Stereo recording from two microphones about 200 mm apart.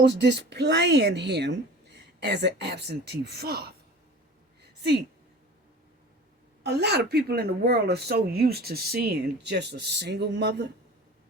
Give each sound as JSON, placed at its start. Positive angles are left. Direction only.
{"t": 0.0, "sound": "speech", "side_deg": -60}
{"t": 4.6, "sound": "a sound", "side_deg": -55}
{"t": 6.6, "sound": "a woman's voice", "side_deg": -55}